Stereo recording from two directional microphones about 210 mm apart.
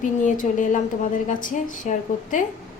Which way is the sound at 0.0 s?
35° left (ahead or behind).